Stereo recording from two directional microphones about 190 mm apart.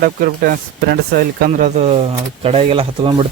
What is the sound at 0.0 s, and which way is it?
Speech, 50° right (ahead or behind).